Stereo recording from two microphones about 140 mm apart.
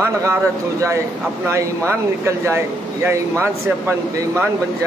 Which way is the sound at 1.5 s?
20° right (ahead or behind).